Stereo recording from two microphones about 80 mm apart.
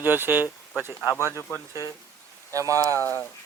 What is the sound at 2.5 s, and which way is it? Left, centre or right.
Speech, right.